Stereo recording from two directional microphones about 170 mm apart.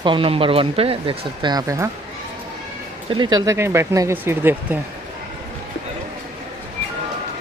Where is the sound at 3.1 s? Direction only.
25° right (ahead or behind).